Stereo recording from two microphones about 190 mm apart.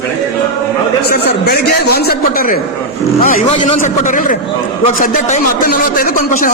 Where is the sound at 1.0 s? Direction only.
55° left (ahead or behind).